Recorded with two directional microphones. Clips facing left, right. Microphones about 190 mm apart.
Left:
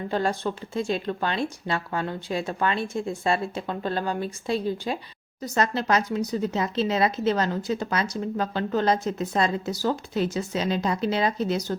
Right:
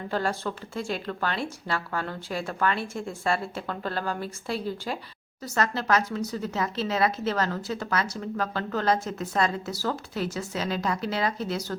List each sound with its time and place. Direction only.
0.1 s speech: 20° left (ahead or behind)